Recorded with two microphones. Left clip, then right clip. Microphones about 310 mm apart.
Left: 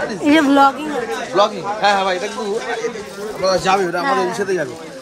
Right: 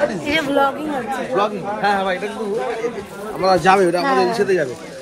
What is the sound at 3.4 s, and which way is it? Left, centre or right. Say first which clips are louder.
Speech: right 2 dB; centre.